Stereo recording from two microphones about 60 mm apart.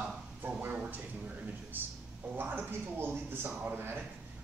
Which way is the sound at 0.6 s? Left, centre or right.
Right.